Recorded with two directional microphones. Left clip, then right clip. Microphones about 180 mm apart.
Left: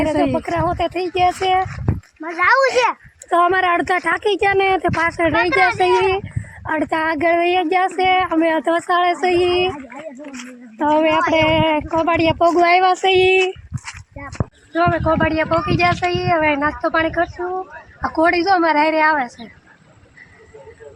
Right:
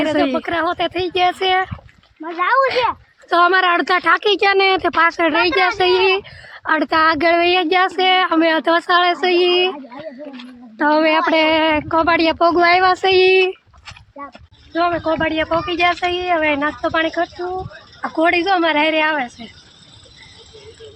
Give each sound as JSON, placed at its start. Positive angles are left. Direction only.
{"t": 0.0, "sound": "speech", "side_deg": 5}
{"t": 2.2, "sound": "speech", "side_deg": -15}
{"t": 2.6, "sound": "speech", "side_deg": 0}
{"t": 10.8, "sound": "speech", "side_deg": -10}
{"t": 14.8, "sound": "speech", "side_deg": 0}